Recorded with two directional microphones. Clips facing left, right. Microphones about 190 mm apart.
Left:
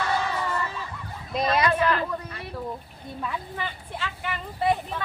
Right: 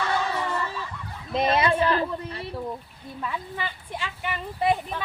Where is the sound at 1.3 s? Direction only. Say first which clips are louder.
Right 1 dB; 25° right (ahead or behind).